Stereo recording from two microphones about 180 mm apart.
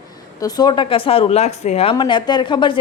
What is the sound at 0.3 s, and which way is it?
A woman's voice, 20° left (ahead or behind).